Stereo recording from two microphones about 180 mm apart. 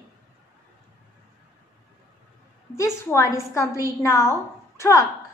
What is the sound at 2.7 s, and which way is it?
A woman's voice, 15° left (ahead or behind).